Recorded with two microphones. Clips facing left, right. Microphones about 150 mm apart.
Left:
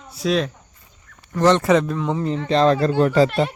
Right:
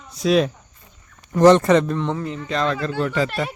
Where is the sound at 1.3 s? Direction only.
10° right (ahead or behind).